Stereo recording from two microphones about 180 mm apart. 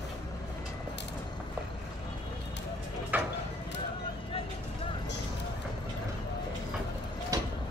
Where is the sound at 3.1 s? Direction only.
10° right (ahead or behind).